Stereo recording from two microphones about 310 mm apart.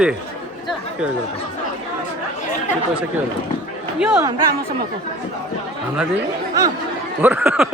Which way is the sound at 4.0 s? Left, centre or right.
Centre.